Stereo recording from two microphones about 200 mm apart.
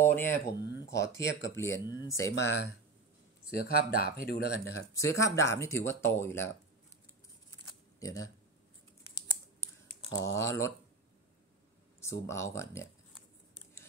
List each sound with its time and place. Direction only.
0.0 s speech: 10° left (ahead or behind)
0.6 s speech: 60° left (ahead or behind)
1.5 s speech: 15° left (ahead or behind)
3.5 s speech: 50° left (ahead or behind)
4.5 s speech: 90° right
4.9 s speech: 15° left (ahead or behind)
8.0 s speech: 15° left (ahead or behind)
10.0 s speech: 15° left (ahead or behind)
12.0 s speech: 15° left (ahead or behind)